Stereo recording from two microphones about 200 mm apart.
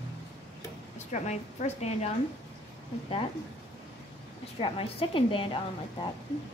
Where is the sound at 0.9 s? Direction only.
35° left (ahead or behind).